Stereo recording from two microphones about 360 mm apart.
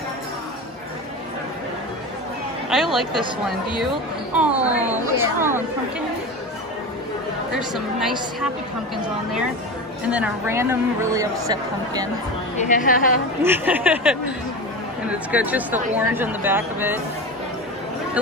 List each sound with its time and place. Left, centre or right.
2.7 s speech: centre
4.4 s speech: centre
7.5 s speech: centre
12.5 s a woman's voice: left
13.4 s speech: centre